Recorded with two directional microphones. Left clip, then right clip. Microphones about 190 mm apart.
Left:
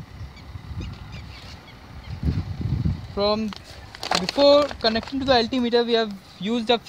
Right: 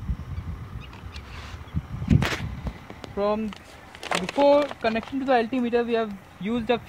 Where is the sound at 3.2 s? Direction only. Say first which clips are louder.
Left 3 dB; 65° left (ahead or behind).